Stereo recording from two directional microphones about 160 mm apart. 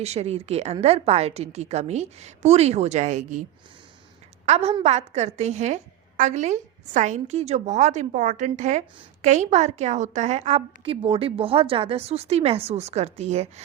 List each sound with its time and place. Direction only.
0.0 s a woman's voice: 40° right (ahead or behind)
4.4 s a woman's voice: 40° right (ahead or behind)